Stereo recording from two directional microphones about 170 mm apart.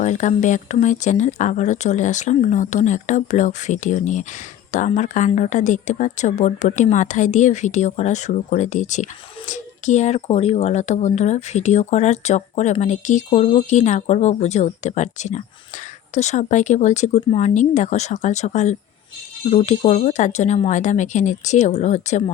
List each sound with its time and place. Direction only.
0.0 s speech: 45° left (ahead or behind)